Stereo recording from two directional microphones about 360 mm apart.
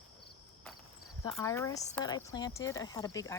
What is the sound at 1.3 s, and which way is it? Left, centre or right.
Speech, centre.